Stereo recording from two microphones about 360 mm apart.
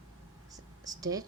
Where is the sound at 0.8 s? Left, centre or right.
Centre.